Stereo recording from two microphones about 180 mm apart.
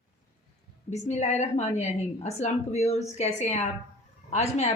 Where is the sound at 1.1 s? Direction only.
40° left (ahead or behind).